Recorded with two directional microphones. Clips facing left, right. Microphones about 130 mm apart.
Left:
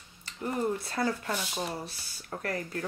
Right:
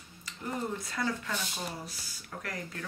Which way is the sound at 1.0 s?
30° left (ahead or behind).